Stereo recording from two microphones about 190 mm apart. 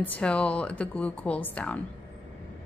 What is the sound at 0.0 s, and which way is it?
Speech, 10° left (ahead or behind).